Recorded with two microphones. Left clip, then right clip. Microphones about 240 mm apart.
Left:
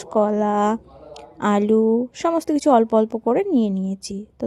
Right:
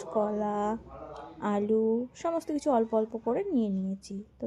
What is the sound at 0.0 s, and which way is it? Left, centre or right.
Speech, left.